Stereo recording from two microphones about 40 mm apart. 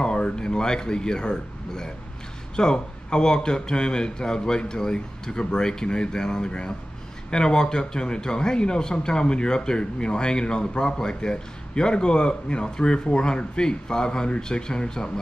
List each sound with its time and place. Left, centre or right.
0.0 s a man's voice: left